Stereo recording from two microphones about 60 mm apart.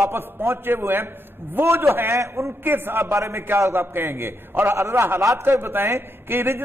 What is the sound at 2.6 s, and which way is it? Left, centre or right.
Speech, right.